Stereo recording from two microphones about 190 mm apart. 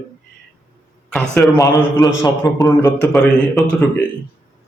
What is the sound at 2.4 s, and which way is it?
A man's voice, centre (ahead or behind).